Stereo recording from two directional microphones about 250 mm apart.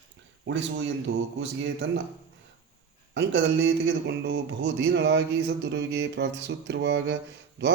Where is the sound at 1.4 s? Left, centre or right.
Right.